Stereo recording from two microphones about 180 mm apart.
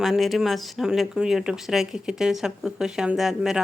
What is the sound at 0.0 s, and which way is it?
Speech, centre (ahead or behind).